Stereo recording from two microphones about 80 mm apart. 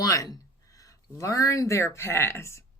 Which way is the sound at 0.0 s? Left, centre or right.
Left.